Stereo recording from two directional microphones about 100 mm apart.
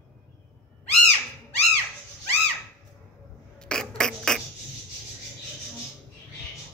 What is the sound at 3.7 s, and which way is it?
Rodents, 5° left (ahead or behind).